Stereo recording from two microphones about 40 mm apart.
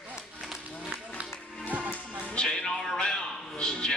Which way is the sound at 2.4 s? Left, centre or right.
Centre.